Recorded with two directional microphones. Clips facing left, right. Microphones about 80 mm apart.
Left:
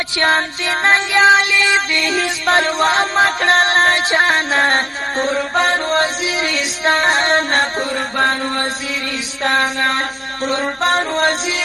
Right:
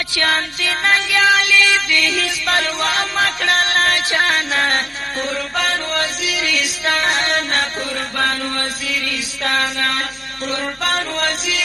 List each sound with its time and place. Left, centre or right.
0.2 s music: left